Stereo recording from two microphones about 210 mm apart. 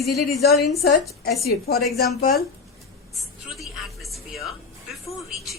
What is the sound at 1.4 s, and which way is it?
A woman's voice, 45° left (ahead or behind).